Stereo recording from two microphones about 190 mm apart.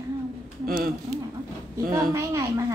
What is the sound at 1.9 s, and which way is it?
Speech, 20° right (ahead or behind).